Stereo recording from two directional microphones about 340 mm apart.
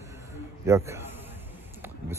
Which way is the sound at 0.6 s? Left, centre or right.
Centre.